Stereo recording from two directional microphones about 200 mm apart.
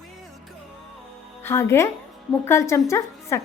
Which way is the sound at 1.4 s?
15° left (ahead or behind).